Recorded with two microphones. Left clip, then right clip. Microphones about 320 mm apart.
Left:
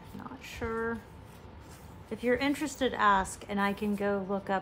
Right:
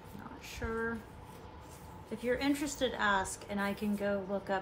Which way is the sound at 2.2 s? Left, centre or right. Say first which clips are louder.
Left 4 dB; left.